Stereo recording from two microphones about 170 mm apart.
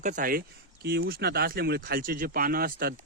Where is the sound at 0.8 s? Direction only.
65° right (ahead or behind).